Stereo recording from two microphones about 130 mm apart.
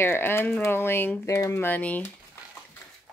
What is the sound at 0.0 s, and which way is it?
Speech, 20° left (ahead or behind).